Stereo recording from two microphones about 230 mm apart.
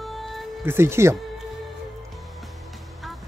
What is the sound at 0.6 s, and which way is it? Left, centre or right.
Speech, centre.